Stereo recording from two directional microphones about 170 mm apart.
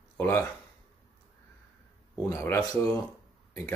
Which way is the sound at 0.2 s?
10° left (ahead or behind).